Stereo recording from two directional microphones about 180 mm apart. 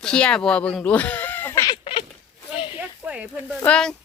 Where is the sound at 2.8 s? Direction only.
5° right (ahead or behind).